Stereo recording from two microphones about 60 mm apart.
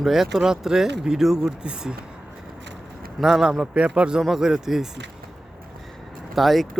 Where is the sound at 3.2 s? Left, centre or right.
Centre.